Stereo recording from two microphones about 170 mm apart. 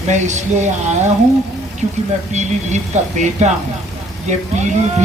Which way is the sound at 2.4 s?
45° right (ahead or behind).